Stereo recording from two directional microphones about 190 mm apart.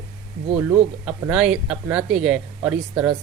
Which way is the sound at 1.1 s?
5° right (ahead or behind).